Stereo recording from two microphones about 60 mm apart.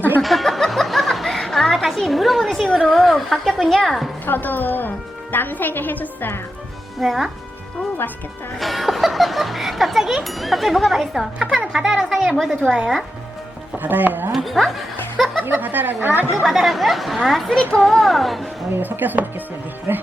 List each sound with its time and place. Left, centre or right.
0.2 s a sound: centre
2.7 s speech: centre
4.3 s a woman's voice: left
7.0 s speech: centre
8.5 s a woman's voice: centre
13.8 s speech: right
14.3 s speech: centre
15.4 s speech: right
16.4 s speech: centre
18.7 s speech: right